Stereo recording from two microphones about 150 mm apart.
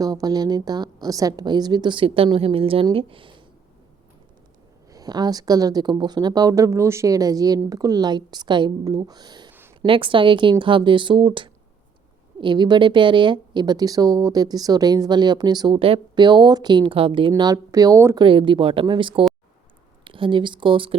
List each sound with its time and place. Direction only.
0.0 s a woman's voice: 25° right (ahead or behind)
4.9 s a woman's voice: 25° right (ahead or behind)
9.5 s a sound: 15° right (ahead or behind)
9.8 s a woman's voice: 35° right (ahead or behind)
18.2 s speech: 35° right (ahead or behind)